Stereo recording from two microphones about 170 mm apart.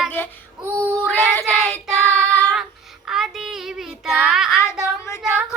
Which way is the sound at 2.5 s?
5° right (ahead or behind).